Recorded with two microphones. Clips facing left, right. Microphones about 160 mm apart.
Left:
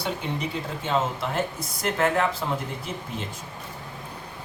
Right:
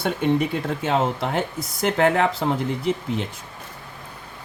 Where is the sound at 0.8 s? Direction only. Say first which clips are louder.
Right 3 dB; 70° right (ahead or behind).